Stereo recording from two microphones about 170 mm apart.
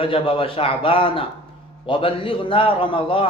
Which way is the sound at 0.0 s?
30° left (ahead or behind).